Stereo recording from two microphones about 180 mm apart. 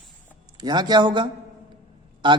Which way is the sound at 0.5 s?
25° right (ahead or behind).